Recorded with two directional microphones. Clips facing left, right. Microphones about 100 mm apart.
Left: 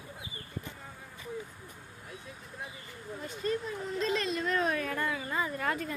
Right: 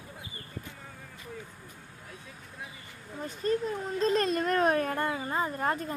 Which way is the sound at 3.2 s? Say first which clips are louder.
Right 4 dB; 40° right (ahead or behind).